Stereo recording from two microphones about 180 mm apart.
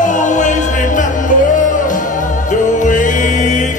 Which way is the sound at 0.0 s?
45° left (ahead or behind).